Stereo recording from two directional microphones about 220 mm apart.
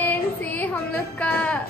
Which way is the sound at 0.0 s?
10° left (ahead or behind).